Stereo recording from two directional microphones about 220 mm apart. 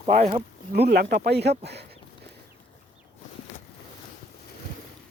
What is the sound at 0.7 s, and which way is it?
Speech, 45° right (ahead or behind).